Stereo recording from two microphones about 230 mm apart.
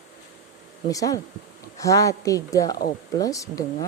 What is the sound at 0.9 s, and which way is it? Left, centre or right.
A woman's voice, centre.